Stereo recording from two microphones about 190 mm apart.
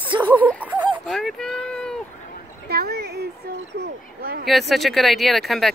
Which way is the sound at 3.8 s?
55° right (ahead or behind).